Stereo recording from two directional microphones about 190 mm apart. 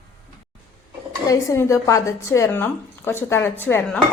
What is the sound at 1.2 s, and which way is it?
A woman's voice, 15° left (ahead or behind).